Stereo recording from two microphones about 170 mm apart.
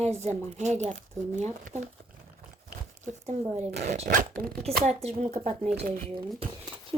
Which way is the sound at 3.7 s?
40° right (ahead or behind).